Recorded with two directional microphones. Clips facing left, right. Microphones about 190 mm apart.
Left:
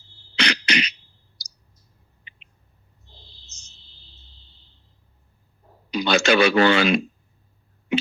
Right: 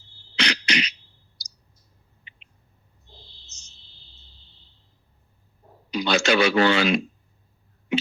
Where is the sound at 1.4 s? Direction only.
55° left (ahead or behind).